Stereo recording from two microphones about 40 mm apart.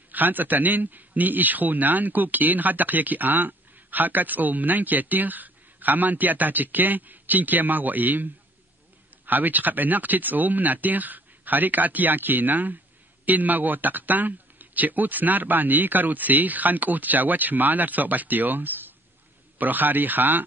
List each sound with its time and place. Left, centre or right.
0.1 s a man's voice: right